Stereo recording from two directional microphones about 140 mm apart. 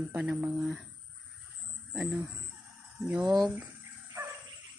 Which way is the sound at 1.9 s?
5° right (ahead or behind).